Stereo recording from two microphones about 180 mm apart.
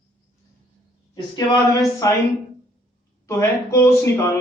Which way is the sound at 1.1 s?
25° left (ahead or behind).